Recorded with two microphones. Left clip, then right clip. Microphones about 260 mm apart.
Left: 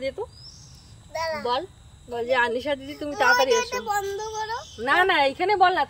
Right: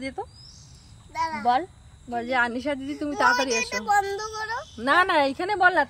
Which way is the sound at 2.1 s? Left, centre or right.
Centre.